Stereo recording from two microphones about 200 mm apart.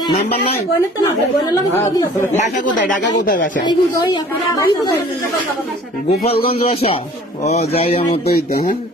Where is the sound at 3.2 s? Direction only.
45° left (ahead or behind).